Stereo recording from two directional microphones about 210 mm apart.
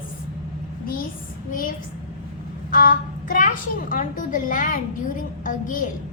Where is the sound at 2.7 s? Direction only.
40° left (ahead or behind).